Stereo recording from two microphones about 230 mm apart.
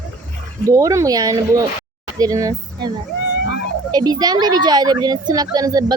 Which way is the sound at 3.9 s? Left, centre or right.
Centre.